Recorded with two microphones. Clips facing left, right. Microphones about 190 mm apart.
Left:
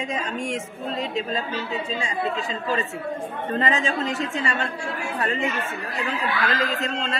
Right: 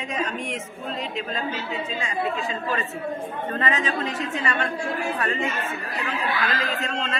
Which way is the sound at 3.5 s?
30° left (ahead or behind).